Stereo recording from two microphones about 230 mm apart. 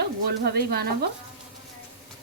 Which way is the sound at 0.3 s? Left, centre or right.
Right.